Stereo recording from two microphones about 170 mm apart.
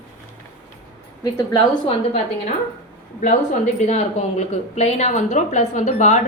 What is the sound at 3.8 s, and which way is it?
Speech, 40° left (ahead or behind).